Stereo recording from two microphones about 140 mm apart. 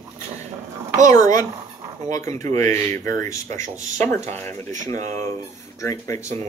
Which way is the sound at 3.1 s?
20° left (ahead or behind).